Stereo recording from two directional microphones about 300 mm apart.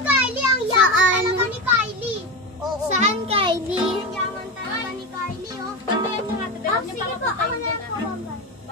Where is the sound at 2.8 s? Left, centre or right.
Right.